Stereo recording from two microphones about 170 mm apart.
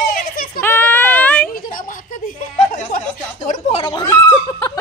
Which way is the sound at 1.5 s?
50° left (ahead or behind).